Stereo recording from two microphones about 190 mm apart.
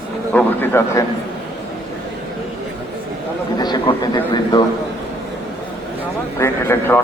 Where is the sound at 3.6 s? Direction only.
20° left (ahead or behind).